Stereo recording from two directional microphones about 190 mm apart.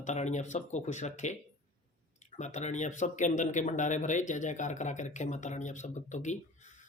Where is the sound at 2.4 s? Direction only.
40° left (ahead or behind).